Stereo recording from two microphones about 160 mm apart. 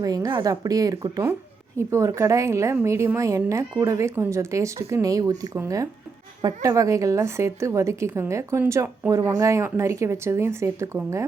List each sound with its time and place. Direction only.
0.0 s a woman's voice: 20° right (ahead or behind)